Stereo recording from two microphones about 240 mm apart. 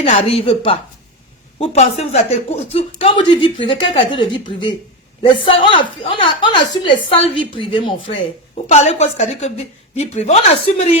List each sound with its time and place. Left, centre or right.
0.0 s a woman's voice: left